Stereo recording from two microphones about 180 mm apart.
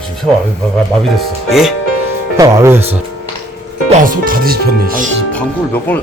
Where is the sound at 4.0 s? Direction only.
50° right (ahead or behind).